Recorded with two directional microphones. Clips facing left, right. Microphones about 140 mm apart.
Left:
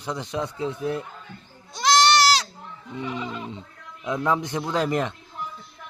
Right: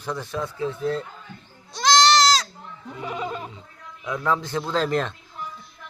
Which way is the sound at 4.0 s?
20° left (ahead or behind).